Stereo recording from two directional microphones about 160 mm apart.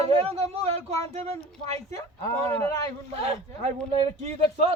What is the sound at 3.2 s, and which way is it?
Speech, 35° right (ahead or behind).